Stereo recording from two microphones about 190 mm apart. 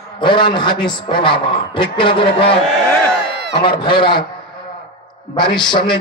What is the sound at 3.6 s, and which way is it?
Speech, 25° left (ahead or behind).